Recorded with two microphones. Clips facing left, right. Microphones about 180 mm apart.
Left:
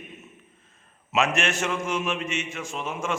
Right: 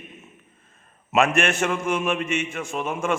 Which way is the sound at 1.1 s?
55° right (ahead or behind).